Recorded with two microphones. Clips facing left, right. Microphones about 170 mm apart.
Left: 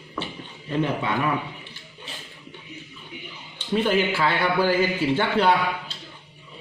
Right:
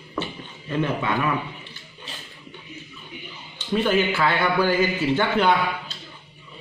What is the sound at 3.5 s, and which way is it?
A man's voice, 30° left (ahead or behind).